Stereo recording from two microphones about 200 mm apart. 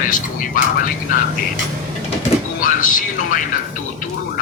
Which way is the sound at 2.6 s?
40° left (ahead or behind).